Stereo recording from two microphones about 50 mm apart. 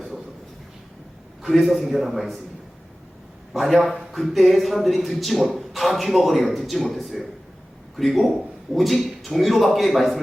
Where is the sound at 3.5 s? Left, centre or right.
Centre.